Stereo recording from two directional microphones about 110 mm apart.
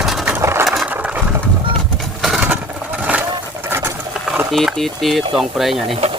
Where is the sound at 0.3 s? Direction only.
25° right (ahead or behind).